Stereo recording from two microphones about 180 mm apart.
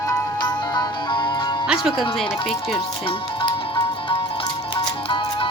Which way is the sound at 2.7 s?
30° left (ahead or behind).